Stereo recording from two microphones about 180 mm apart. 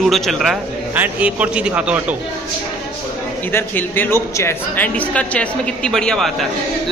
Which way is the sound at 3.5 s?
10° left (ahead or behind).